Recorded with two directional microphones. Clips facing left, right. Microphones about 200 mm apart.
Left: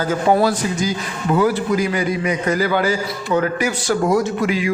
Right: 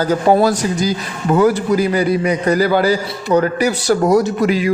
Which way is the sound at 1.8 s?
35° right (ahead or behind).